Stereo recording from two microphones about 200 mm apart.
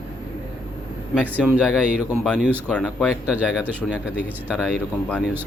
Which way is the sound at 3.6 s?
5° right (ahead or behind).